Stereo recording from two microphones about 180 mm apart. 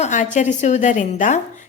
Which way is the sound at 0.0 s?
40° left (ahead or behind).